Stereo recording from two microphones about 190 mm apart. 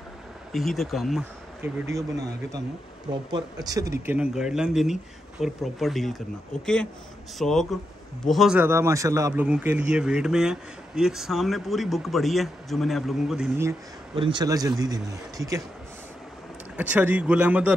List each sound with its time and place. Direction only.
0.5 s a man's voice: centre (ahead or behind)
1.6 s speech: 15° right (ahead or behind)
3.1 s a man's voice: 20° right (ahead or behind); by 8.5 s centre (ahead or behind)
8.5 s a man's voice: 15° right (ahead or behind)
14.1 s a man's voice: 25° right (ahead or behind)
16.7 s speech: 10° right (ahead or behind)